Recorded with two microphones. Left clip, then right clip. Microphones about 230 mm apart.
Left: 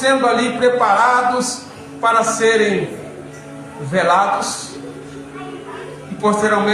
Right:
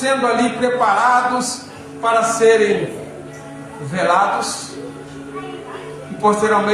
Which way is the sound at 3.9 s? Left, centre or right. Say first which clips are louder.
Left 1 dB; left.